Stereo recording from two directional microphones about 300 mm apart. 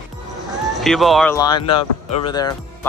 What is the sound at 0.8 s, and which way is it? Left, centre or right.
Speech, centre.